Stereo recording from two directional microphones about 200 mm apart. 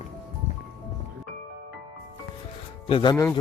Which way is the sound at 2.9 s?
20° left (ahead or behind).